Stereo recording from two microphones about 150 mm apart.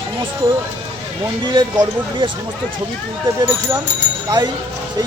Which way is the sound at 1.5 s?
30° right (ahead or behind).